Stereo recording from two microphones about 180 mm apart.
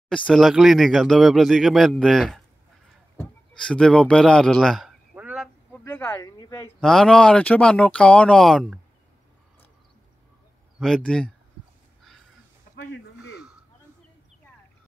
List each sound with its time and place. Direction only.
0.3 s a man's voice: centre (ahead or behind)
3.6 s a man's voice: 5° left (ahead or behind)
5.1 s fowl: 5° right (ahead or behind)
5.9 s a man's voice: 10° left (ahead or behind)
6.8 s a man's voice: centre (ahead or behind)
10.8 s a man's voice: 5° left (ahead or behind)
12.7 s a sound: 70° left (ahead or behind)